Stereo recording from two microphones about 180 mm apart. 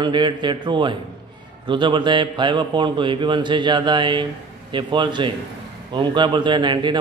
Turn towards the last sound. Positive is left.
turn(degrees=-25)  # may be behind; listen again after turning